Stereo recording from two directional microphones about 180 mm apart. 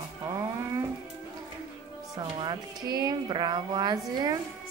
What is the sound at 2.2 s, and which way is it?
Speech, 25° right (ahead or behind).